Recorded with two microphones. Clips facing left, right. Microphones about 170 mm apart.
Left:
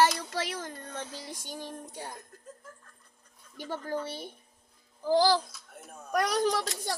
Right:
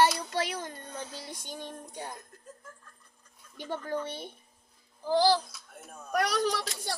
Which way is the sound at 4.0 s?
10° left (ahead or behind).